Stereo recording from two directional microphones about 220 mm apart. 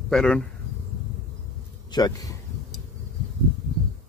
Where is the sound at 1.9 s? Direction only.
20° left (ahead or behind).